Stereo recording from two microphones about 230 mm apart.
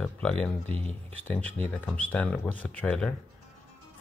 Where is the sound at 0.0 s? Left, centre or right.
Centre.